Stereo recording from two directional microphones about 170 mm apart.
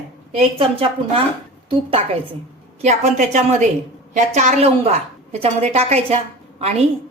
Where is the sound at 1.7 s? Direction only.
35° right (ahead or behind).